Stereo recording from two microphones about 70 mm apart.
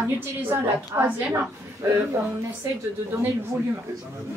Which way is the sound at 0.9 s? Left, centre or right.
Right.